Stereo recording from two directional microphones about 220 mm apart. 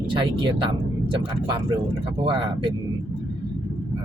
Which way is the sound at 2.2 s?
20° right (ahead or behind).